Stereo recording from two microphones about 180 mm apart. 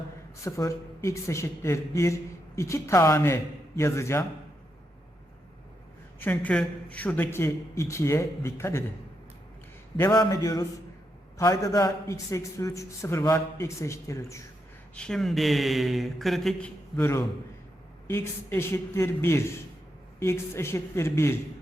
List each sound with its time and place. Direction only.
0.4 s a man's voice: 15° left (ahead or behind)
6.1 s a man's voice: 10° left (ahead or behind)
10.0 s a man's voice: 20° left (ahead or behind)
14.9 s a man's voice: 5° left (ahead or behind)